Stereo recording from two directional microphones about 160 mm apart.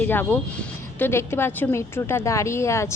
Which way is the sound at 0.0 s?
10° left (ahead or behind).